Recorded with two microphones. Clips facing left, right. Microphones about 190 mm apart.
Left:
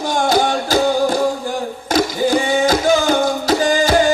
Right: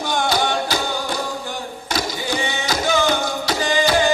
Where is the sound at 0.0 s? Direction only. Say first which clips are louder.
Left 5 dB; 45° left (ahead or behind).